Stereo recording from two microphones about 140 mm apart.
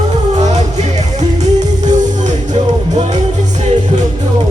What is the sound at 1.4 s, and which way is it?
Music, 60° right (ahead or behind).